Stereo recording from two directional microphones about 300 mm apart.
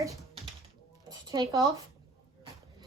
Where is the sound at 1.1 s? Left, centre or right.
Centre.